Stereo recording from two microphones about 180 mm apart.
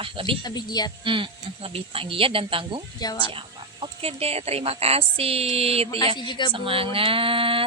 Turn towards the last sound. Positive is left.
turn(degrees=-30)  # may be behind; listen again after turning